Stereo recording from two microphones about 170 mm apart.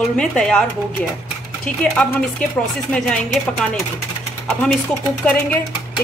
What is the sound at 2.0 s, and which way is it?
Speech, 5° left (ahead or behind).